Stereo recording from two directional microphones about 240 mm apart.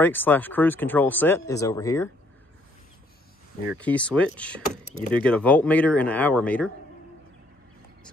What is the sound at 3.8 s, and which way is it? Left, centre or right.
Speech, centre.